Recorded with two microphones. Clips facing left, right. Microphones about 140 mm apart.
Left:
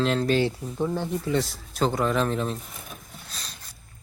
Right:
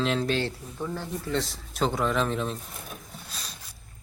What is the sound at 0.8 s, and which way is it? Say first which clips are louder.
Speech: left 6 dB; 20° left (ahead or behind).